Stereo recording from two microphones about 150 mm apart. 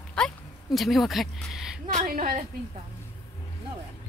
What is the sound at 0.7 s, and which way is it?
Speech, centre (ahead or behind).